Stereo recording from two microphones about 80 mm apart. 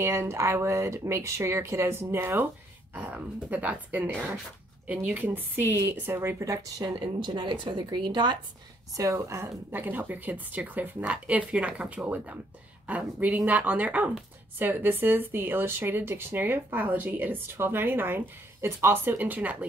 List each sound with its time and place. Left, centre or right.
0.0 s speech: right
3.0 s speech: centre; by 6.9 s right
7.2 s speech: right
8.9 s speech: right; by 19.6 s centre